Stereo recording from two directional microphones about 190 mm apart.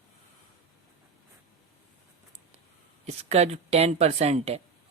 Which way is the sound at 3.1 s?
35° right (ahead or behind).